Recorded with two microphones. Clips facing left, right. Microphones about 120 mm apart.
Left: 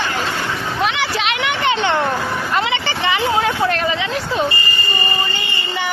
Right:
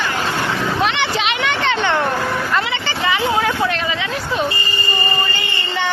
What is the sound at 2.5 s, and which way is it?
Vehicle, 20° left (ahead or behind).